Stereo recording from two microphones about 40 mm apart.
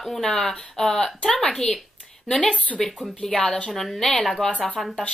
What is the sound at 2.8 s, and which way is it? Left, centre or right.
A woman's voice, centre.